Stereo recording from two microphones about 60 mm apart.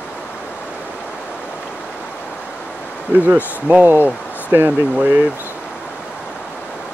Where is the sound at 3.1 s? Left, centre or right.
Right.